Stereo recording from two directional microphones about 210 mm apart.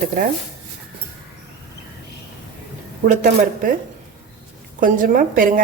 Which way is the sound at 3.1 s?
40° right (ahead or behind).